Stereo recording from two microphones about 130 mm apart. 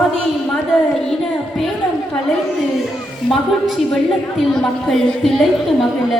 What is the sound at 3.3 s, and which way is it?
A woman's voice, centre (ahead or behind).